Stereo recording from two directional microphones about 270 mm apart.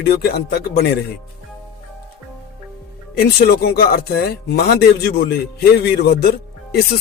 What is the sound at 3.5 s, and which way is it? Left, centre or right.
Speech, left.